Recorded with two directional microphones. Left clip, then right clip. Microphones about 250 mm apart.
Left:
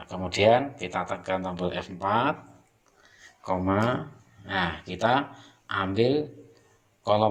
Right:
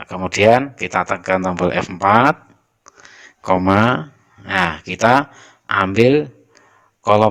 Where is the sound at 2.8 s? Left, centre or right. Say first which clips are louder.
Right 13 dB; right.